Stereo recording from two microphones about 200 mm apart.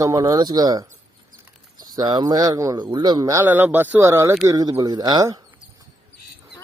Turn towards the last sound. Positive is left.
turn(degrees=-20)  # may be behind; listen again after turning